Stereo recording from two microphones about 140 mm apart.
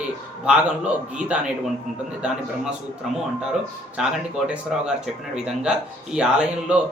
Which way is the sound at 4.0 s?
5° right (ahead or behind).